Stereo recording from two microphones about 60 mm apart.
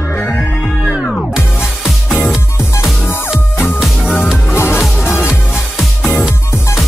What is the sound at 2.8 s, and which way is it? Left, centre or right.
Music, left.